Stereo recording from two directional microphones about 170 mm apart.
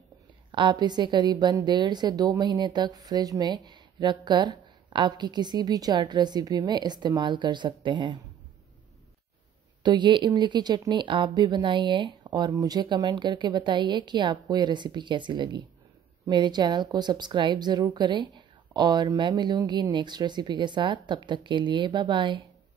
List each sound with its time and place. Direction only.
0.5 s a woman's voice: 25° right (ahead or behind)
9.8 s a woman's voice: 25° right (ahead or behind)